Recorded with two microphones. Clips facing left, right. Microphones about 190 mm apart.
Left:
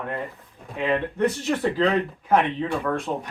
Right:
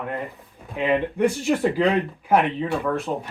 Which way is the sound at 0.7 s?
15° right (ahead or behind).